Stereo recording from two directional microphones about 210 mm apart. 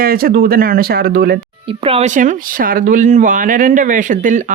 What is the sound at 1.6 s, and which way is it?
A woman's voice, 25° right (ahead or behind).